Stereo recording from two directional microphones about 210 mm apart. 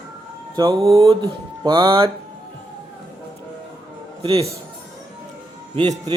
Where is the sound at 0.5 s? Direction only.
20° right (ahead or behind).